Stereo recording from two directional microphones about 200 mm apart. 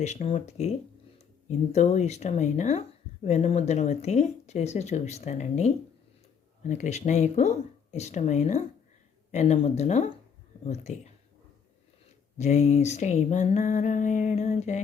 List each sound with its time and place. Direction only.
0.0 s speech: 35° left (ahead or behind)
12.4 s speech: 35° left (ahead or behind)